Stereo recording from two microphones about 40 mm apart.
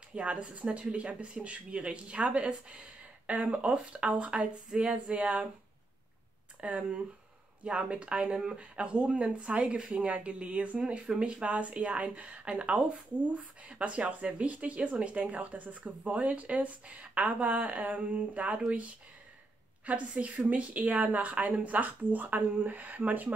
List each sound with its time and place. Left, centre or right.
0.1 s speech: right
6.6 s speech: right
19.9 s speech: right